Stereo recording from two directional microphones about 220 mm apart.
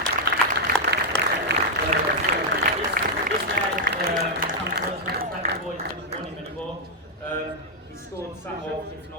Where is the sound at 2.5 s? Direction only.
35° right (ahead or behind).